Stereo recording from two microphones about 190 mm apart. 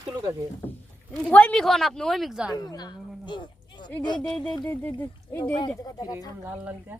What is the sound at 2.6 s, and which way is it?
Speech, 20° left (ahead or behind).